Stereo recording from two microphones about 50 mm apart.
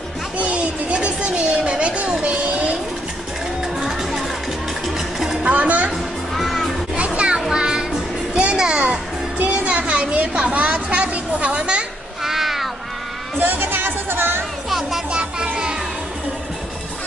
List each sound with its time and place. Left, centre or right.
0.4 s music: right
3.6 s music: centre
4.9 s a sound: centre
5.4 s music: right
6.3 s music: centre
7.1 s children playing: right
7.5 s music: centre
9.4 s a sound: right
12.2 s cat: centre
13.4 s music: right
14.7 s music: centre
15.0 s music: right